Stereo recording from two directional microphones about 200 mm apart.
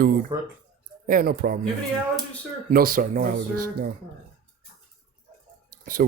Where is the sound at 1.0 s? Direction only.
45° right (ahead or behind).